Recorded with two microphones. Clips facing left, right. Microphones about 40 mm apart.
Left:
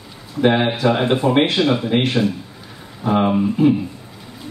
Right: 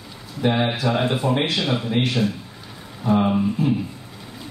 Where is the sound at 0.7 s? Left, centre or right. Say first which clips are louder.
Left 5 dB; left.